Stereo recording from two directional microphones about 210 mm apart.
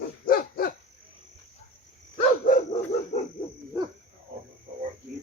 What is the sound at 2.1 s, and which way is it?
Dog, 35° left (ahead or behind).